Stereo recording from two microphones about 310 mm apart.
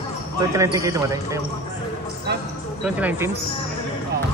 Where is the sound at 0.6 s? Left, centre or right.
Centre.